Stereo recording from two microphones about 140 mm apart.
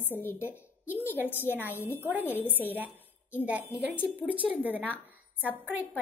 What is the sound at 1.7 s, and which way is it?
Speech, 15° left (ahead or behind).